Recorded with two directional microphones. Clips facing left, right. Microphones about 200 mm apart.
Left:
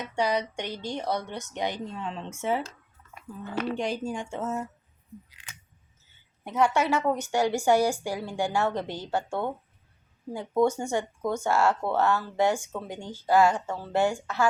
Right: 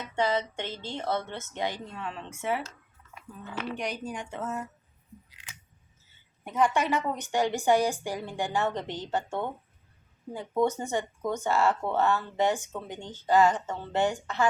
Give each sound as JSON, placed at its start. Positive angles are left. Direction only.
{"t": 0.0, "sound": "speech", "side_deg": 15}
{"t": 3.4, "sound": "speech", "side_deg": 45}
{"t": 3.8, "sound": "speech", "side_deg": 25}
{"t": 6.4, "sound": "a woman's voice", "side_deg": 10}